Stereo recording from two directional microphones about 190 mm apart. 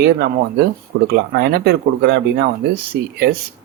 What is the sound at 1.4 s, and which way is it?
Speech, 60° right (ahead or behind).